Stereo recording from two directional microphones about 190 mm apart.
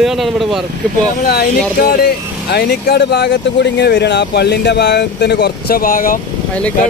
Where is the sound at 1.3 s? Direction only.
55° left (ahead or behind).